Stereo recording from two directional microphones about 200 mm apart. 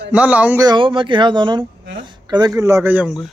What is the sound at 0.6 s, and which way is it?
A man's voice, 25° right (ahead or behind).